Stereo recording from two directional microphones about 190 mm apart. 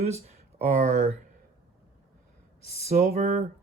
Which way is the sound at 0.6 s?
45° right (ahead or behind).